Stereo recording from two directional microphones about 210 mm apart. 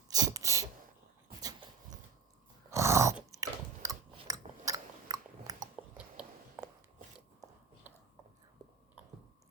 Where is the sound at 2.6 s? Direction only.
15° right (ahead or behind).